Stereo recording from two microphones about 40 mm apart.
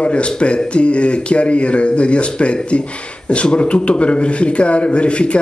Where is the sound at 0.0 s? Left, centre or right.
Left.